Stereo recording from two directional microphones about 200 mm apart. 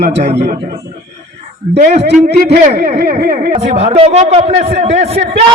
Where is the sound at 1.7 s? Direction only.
40° right (ahead or behind).